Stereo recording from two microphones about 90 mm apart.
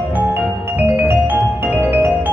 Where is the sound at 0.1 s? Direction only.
20° right (ahead or behind).